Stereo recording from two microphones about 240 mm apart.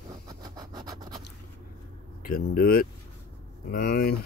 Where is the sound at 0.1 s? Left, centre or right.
Centre.